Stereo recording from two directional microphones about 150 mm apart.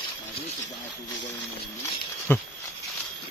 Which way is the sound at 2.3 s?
15° left (ahead or behind).